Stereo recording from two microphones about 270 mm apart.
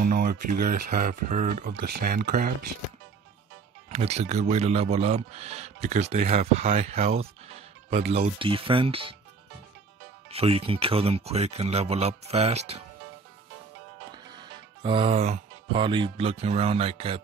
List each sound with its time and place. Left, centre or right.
0.0 s speech: right
3.9 s speech: right
10.3 s speech: right
14.1 s speech: centre